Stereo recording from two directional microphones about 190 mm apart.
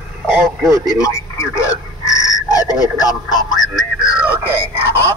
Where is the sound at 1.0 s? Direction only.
15° left (ahead or behind).